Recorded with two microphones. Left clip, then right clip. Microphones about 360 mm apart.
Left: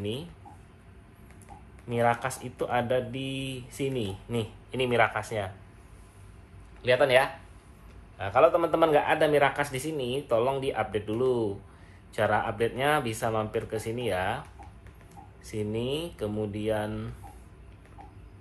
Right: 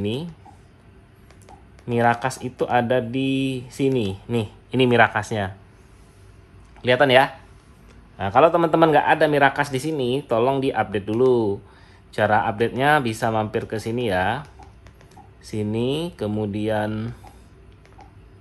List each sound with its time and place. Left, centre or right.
1.9 s speech: right
6.8 s speech: right
15.4 s speech: right